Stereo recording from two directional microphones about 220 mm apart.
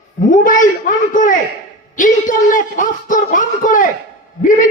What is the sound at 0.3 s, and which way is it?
A man's voice, 35° left (ahead or behind).